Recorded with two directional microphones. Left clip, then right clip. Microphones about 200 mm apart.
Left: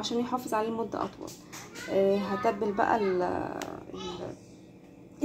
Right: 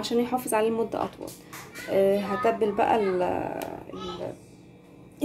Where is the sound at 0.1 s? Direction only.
15° right (ahead or behind).